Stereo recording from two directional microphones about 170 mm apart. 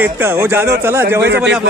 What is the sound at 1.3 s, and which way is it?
Speech, 80° right.